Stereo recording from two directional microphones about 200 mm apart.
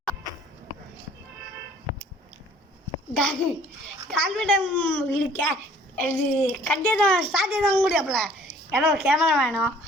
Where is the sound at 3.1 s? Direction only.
5° left (ahead or behind).